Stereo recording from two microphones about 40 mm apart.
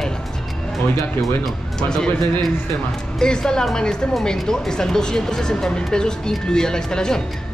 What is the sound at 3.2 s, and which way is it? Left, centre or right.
Speech, centre.